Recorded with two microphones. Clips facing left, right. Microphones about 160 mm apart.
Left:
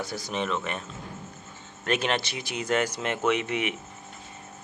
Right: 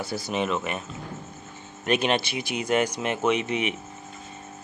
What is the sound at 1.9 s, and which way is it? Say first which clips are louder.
Speech: right 3 dB; 15° right (ahead or behind).